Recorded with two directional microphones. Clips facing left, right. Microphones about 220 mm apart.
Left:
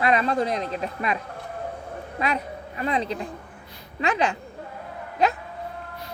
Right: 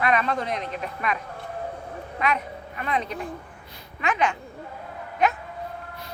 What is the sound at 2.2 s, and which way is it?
A child's voice, 35° left (ahead or behind).